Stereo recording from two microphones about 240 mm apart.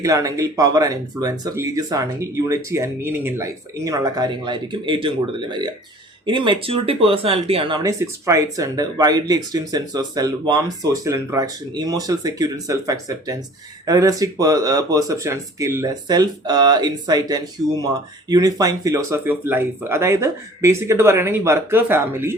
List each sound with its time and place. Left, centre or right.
0.0 s speech: centre